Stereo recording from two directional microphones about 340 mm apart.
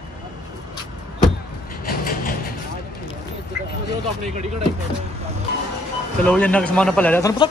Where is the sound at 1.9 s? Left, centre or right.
Left.